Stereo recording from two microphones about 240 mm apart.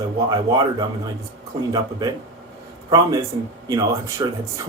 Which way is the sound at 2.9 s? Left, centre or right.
Centre.